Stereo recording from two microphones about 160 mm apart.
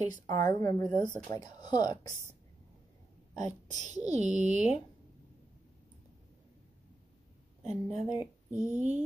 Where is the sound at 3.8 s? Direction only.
50° right (ahead or behind).